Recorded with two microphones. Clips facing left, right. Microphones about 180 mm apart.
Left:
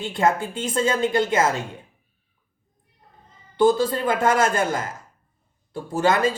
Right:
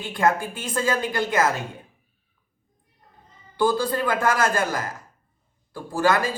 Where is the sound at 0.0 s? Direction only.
25° left (ahead or behind).